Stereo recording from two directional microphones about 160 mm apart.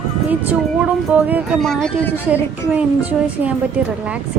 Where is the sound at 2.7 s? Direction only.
10° right (ahead or behind).